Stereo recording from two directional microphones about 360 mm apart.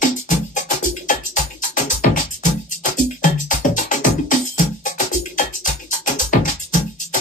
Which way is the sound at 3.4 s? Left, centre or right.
Left.